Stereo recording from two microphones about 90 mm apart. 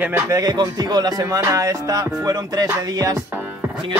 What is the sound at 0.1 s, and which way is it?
Speech, 40° right (ahead or behind).